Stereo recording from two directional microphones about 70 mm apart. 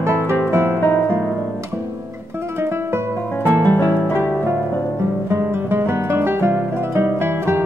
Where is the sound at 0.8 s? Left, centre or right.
Left.